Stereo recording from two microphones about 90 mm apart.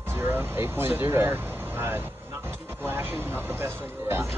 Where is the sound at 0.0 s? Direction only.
25° right (ahead or behind).